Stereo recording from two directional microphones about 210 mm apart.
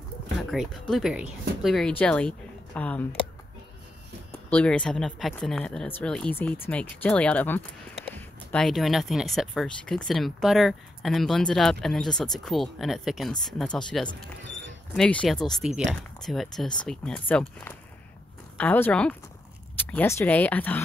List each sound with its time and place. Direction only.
0.4 s speech: centre (ahead or behind)
4.5 s speech: 5° left (ahead or behind)
14.4 s a sound: 60° right (ahead or behind)
15.0 s speech: 5° left (ahead or behind)